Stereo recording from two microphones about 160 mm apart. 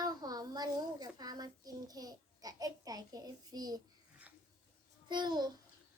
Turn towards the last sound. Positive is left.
turn(degrees=-25)  # may be behind; listen again after turning